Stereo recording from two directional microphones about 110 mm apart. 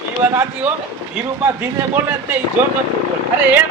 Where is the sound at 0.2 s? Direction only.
15° right (ahead or behind).